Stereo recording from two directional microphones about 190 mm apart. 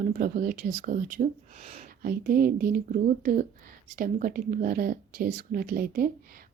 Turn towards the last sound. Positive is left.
turn(degrees=-50)  # may be behind; listen again after turning